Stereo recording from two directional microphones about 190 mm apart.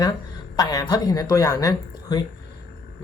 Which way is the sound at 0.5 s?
20° left (ahead or behind).